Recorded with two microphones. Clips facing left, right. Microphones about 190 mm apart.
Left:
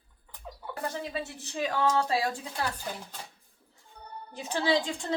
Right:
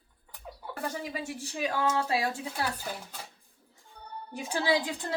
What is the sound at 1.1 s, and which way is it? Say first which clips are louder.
A woman's voice: left 1 dB; 10° right (ahead or behind).